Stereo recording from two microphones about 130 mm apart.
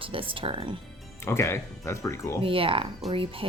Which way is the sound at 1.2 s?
20° left (ahead or behind).